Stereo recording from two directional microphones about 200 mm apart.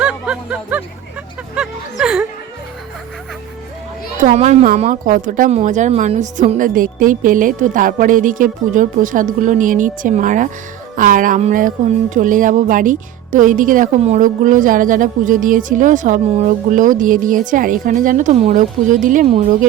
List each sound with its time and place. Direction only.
0.0 s music: 5° right (ahead or behind)
4.2 s speech: 40° right (ahead or behind)
19.3 s speech: 30° right (ahead or behind)